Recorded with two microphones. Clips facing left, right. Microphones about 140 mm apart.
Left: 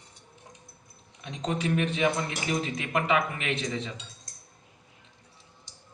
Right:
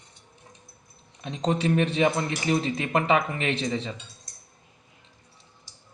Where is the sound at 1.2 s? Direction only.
35° right (ahead or behind).